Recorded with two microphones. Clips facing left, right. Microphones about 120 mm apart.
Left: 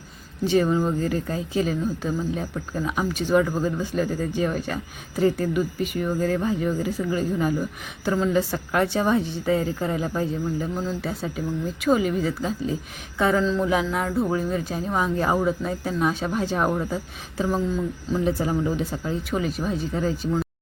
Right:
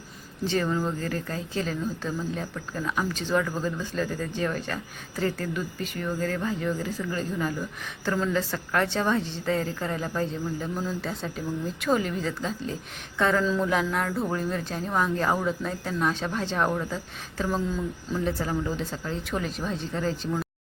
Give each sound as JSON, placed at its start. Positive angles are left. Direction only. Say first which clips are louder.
{"t": 0.4, "sound": "speech", "louder": "left 6 dB", "side_deg": 15}
{"t": 13.4, "sound": "speech", "louder": "left 2 dB", "side_deg": -5}
{"t": 13.7, "sound": "speech", "louder": "left 3 dB", "side_deg": 5}